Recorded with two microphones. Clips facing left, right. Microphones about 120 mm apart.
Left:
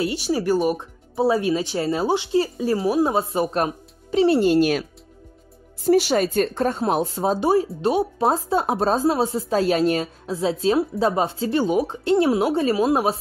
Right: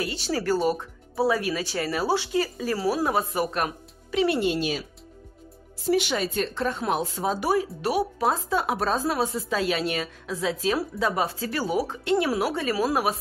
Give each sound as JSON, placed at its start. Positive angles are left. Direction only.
{"t": 0.1, "sound": "a woman's voice", "side_deg": 15}
{"t": 5.9, "sound": "a woman's voice", "side_deg": 40}